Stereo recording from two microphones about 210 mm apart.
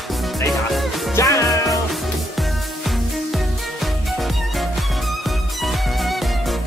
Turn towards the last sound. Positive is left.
turn(degrees=0)  # may be behind; listen again after turning